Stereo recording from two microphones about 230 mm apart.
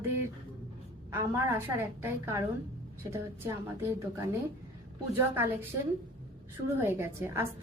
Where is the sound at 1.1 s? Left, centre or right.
Centre.